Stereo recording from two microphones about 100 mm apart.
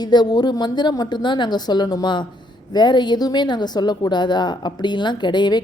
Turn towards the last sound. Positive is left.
turn(degrees=50)  # may be behind; listen again after turning